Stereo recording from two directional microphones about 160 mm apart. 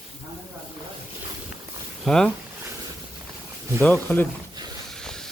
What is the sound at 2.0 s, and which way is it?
Speech, 5° left (ahead or behind).